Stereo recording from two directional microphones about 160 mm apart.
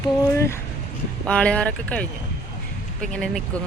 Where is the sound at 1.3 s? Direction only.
5° left (ahead or behind).